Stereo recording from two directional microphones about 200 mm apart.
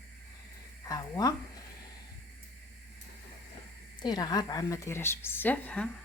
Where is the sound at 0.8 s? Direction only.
20° left (ahead or behind).